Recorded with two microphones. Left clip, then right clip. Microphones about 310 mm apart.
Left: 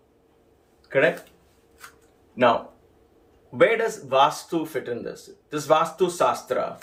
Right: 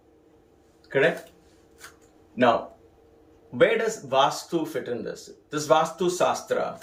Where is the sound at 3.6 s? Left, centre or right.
Centre.